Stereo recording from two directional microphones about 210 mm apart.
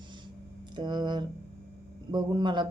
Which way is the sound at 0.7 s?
20° right (ahead or behind).